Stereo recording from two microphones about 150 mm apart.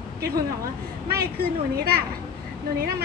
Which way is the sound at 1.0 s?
90° right.